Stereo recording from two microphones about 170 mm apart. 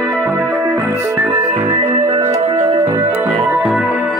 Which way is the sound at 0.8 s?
15° right (ahead or behind).